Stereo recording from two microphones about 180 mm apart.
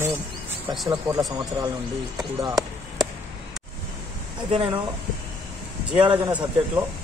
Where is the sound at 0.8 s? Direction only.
15° right (ahead or behind).